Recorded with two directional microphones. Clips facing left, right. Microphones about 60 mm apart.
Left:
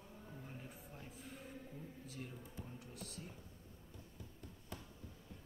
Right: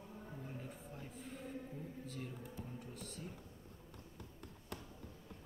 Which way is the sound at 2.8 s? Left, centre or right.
Centre.